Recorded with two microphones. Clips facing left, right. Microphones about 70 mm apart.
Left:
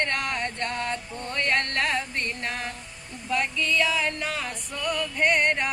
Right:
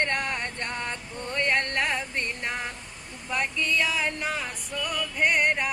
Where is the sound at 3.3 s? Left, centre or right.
Centre.